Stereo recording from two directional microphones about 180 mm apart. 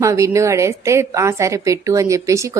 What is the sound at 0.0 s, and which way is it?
A woman's voice, 15° right (ahead or behind).